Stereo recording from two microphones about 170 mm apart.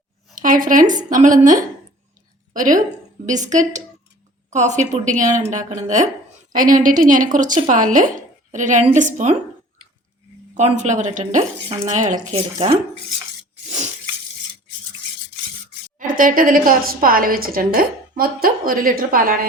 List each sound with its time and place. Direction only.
0.3 s a woman's voice: 55° right (ahead or behind)
10.5 s a woman's voice: 45° right (ahead or behind)
12.3 s speech: 35° right (ahead or behind)
13.7 s a sound: 40° right (ahead or behind)
16.0 s a woman's voice: 55° right (ahead or behind)